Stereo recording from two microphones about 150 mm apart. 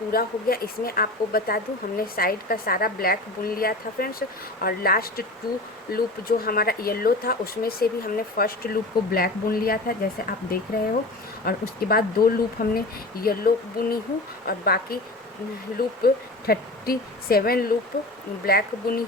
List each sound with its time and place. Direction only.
0.1 s speech: 85° left
12.6 s speech: 70° left (ahead or behind)
13.2 s a woman's voice: 80° left